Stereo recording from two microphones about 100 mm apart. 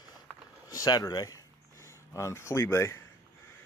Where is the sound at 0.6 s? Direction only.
40° left (ahead or behind).